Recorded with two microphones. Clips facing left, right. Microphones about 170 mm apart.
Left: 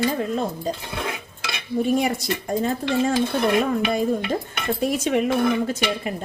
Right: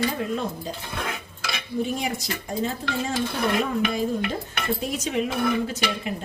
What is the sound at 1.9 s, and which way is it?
Speech, 55° left (ahead or behind).